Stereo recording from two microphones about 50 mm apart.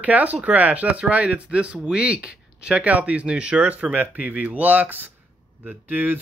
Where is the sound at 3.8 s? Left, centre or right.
Right.